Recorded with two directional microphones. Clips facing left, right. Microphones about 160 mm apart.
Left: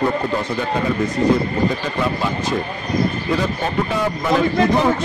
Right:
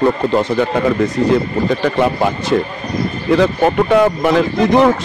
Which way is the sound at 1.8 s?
65° right (ahead or behind).